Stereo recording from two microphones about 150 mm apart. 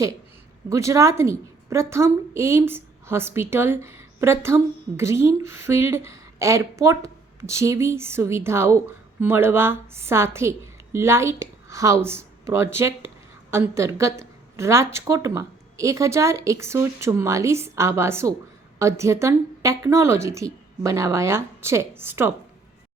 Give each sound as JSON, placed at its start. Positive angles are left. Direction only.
{"t": 0.7, "sound": "a woman's voice", "side_deg": -20}